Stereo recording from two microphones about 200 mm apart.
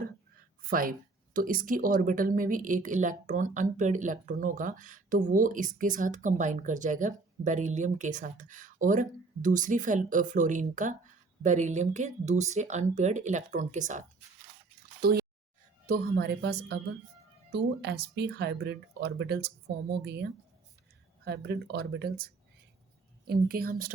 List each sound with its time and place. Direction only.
0.7 s speech: 45° right (ahead or behind)
15.0 s speech: 50° right (ahead or behind)
21.2 s speech: 55° right (ahead or behind)